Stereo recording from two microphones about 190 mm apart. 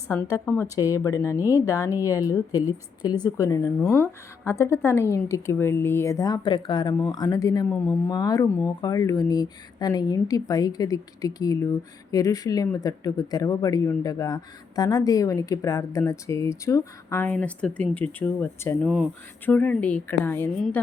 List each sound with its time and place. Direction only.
0.3 s speech: 10° left (ahead or behind)